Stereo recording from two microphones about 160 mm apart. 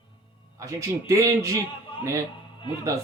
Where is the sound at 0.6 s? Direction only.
20° right (ahead or behind).